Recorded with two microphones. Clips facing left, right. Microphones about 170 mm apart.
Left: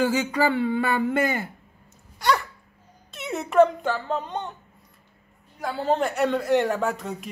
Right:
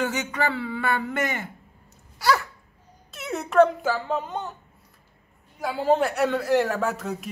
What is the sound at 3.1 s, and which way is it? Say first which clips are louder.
A child's voice: even; centre (ahead or behind).